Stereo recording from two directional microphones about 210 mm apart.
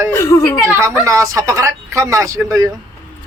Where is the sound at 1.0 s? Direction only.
15° right (ahead or behind).